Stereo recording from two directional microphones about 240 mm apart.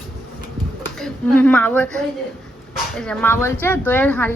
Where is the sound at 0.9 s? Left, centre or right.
Centre.